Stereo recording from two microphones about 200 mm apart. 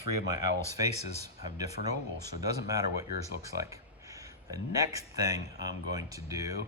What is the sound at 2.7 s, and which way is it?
Speech, 15° right (ahead or behind).